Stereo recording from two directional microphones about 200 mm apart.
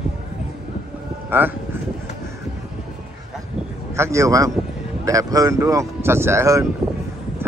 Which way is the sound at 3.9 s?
15° right (ahead or behind).